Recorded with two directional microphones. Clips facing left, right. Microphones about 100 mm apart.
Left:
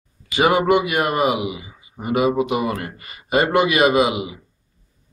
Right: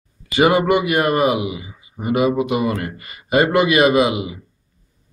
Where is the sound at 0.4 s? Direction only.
20° left (ahead or behind).